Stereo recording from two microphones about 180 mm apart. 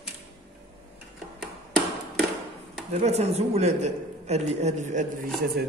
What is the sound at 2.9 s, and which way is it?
A man's voice, 35° right (ahead or behind).